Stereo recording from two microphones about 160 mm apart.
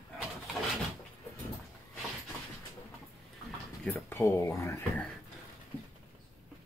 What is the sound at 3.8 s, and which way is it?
Speech, 15° left (ahead or behind).